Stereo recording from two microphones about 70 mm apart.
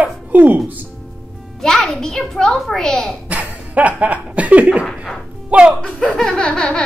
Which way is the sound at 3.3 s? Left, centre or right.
Right.